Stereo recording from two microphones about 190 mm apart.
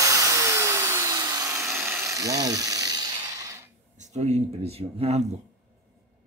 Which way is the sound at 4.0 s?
35° right (ahead or behind).